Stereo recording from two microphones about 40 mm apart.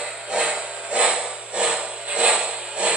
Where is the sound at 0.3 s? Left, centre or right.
Right.